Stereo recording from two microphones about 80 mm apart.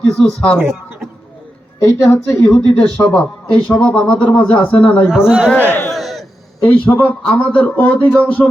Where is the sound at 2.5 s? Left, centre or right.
Centre.